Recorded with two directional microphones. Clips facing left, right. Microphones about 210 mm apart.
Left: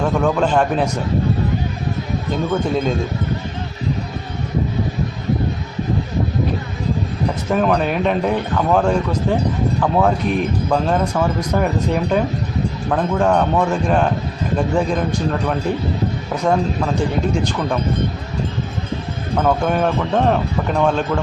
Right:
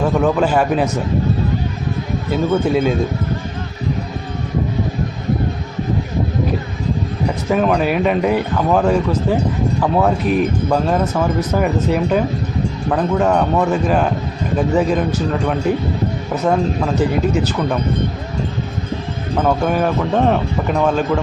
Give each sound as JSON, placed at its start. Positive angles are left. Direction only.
{"t": 0.0, "sound": "a man's voice", "side_deg": -5}
{"t": 2.3, "sound": "a man's voice", "side_deg": -5}
{"t": 7.5, "sound": "speech", "side_deg": -5}
{"t": 19.4, "sound": "speech", "side_deg": -5}